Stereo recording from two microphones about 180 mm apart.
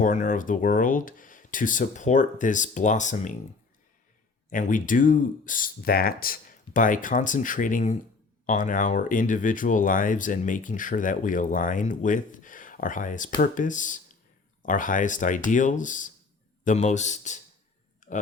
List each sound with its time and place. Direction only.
0.0 s speech: 45° left (ahead or behind)
4.4 s a man's voice: 45° left (ahead or behind)
18.0 s a sound: 40° left (ahead or behind)